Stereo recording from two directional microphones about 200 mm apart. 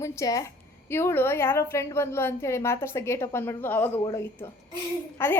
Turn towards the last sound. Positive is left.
turn(degrees=10)  # may be behind; listen again after turning